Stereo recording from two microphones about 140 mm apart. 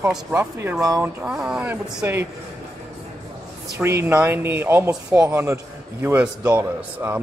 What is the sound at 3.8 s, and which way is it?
A man's voice, 15° right (ahead or behind).